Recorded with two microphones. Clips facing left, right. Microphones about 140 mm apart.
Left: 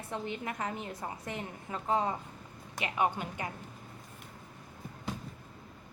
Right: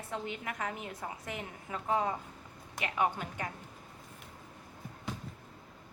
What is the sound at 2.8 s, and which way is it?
Speech, 10° left (ahead or behind).